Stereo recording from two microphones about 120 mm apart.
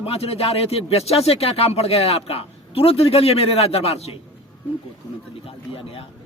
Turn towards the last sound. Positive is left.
turn(degrees=50)  # may be behind; listen again after turning